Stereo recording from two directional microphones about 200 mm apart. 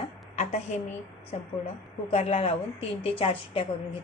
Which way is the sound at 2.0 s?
30° left (ahead or behind).